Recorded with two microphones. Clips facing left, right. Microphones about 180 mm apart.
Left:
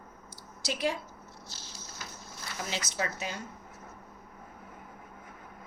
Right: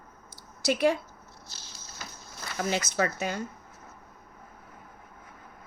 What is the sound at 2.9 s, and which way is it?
Speech, 50° right (ahead or behind).